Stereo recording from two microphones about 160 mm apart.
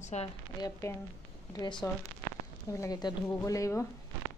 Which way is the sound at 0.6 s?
15° left (ahead or behind).